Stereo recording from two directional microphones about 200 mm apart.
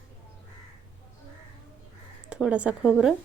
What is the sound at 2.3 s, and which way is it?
Speech, 5° right (ahead or behind).